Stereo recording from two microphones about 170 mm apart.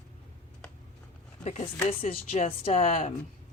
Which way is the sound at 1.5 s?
35° left (ahead or behind).